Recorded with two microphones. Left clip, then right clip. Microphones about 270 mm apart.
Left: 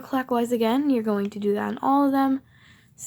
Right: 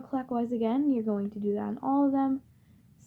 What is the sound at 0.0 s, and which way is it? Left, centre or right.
Speech, left.